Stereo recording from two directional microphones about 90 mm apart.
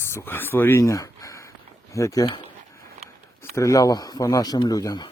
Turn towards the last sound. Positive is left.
turn(degrees=45)  # may be behind; listen again after turning